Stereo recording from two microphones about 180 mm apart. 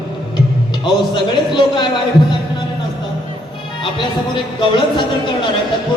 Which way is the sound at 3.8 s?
25° left (ahead or behind).